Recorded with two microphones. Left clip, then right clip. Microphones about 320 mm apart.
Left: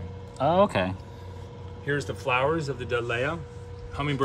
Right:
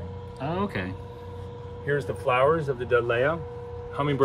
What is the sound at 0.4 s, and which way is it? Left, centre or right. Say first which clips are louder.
Speech: left 8 dB; centre.